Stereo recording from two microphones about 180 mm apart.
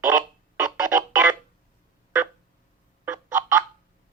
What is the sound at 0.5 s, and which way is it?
Music, 15° right (ahead or behind).